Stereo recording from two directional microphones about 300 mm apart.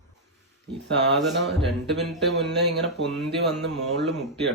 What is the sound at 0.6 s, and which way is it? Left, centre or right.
Speech, right.